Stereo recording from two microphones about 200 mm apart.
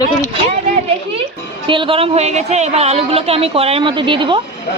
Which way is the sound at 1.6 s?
25° right (ahead or behind).